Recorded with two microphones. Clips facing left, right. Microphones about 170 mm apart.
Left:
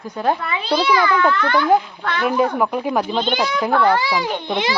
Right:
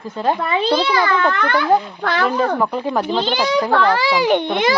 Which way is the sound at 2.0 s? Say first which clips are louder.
Right 3 dB; 90° right.